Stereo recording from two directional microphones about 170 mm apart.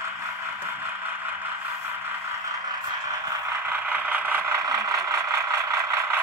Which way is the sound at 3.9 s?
10° right (ahead or behind).